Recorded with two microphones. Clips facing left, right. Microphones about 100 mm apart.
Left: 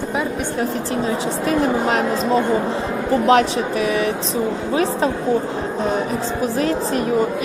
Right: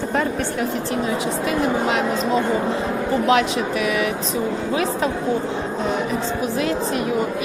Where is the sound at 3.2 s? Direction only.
35° left (ahead or behind).